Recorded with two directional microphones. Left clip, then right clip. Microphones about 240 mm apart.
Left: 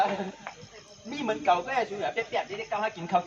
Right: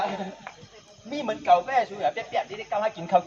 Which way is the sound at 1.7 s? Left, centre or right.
Right.